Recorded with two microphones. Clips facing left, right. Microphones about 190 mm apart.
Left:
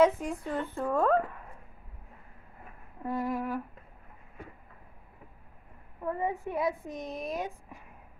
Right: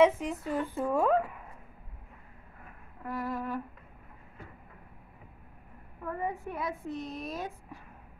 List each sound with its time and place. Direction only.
0.0 s speech: centre (ahead or behind)
3.0 s a woman's voice: 25° left (ahead or behind)
6.0 s a woman's voice: 20° left (ahead or behind)